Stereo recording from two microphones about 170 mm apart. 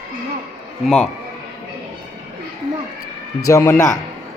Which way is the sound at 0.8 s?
5° left (ahead or behind).